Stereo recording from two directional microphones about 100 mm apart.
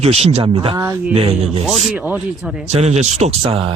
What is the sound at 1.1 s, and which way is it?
Speech, 75° right (ahead or behind).